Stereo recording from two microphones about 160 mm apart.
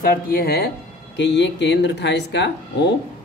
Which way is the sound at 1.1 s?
90° left.